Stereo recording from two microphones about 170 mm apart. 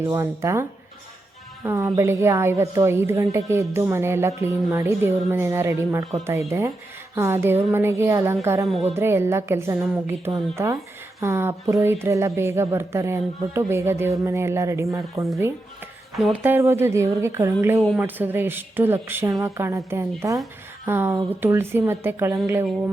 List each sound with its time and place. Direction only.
0.0 s a woman's voice: 15° right (ahead or behind)
16.1 s speech: centre (ahead or behind)
16.4 s a woman's voice: 15° right (ahead or behind)